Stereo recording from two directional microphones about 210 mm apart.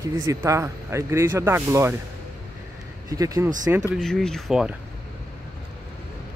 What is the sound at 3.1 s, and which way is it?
Speech, 15° right (ahead or behind).